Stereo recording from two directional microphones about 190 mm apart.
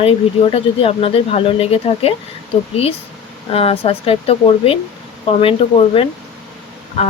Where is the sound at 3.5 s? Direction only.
30° left (ahead or behind).